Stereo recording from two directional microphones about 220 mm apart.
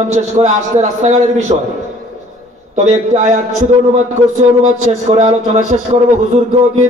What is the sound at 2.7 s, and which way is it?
Speech, 30° right (ahead or behind).